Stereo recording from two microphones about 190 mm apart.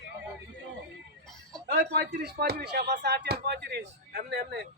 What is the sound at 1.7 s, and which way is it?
Speech, 55° right (ahead or behind).